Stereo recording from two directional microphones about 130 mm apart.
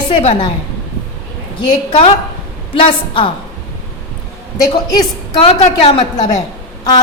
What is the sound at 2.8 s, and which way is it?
Speech, 40° left (ahead or behind).